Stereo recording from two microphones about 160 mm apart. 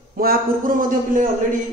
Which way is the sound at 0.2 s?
65° right (ahead or behind).